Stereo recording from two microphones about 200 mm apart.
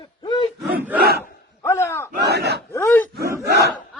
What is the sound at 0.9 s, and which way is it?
Battle cry, 50° right (ahead or behind).